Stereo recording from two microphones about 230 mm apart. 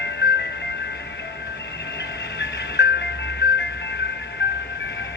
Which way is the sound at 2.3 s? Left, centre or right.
Left.